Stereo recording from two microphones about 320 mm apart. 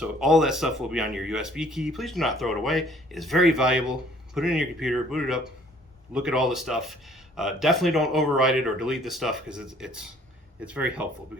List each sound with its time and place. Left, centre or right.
0.0 s speech: centre